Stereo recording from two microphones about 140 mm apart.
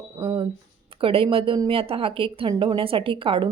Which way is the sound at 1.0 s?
40° right (ahead or behind).